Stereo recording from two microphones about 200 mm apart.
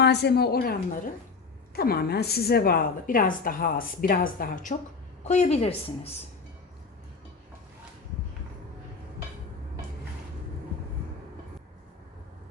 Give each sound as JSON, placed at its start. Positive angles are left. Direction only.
{"t": 0.0, "sound": "a woman's voice", "side_deg": 55}